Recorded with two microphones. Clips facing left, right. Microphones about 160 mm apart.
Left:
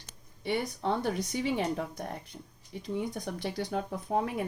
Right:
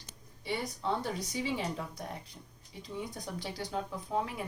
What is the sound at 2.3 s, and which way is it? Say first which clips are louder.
Speech: left 6 dB; 30° left (ahead or behind).